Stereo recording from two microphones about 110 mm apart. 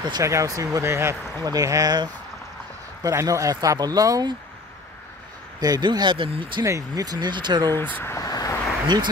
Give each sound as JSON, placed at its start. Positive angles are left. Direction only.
{"t": 0.2, "sound": "speech", "side_deg": -30}
{"t": 5.6, "sound": "speech", "side_deg": -40}
{"t": 6.6, "sound": "speech", "side_deg": -30}
{"t": 7.9, "sound": "speech", "side_deg": 25}
{"t": 8.8, "sound": "speech", "side_deg": -40}